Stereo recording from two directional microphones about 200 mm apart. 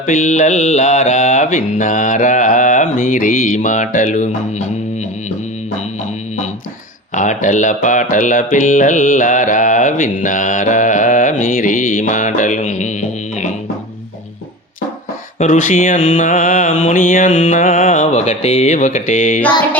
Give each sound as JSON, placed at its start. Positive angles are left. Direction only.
{"t": 0.0, "sound": "speech", "side_deg": 40}
{"t": 7.2, "sound": "speech", "side_deg": 40}
{"t": 15.4, "sound": "speech", "side_deg": 40}